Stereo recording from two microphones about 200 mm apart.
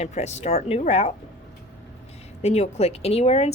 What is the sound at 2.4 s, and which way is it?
Speech, 35° left (ahead or behind).